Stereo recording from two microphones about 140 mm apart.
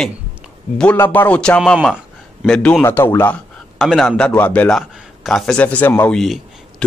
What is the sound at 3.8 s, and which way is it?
A man's voice, centre (ahead or behind).